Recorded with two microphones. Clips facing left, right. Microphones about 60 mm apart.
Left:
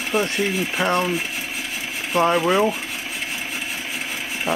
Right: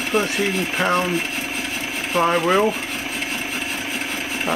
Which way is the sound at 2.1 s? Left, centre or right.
Centre.